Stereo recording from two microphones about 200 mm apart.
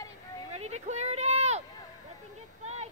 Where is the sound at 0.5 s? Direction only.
35° right (ahead or behind).